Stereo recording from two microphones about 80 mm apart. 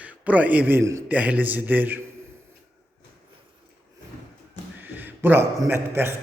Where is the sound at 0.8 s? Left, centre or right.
Right.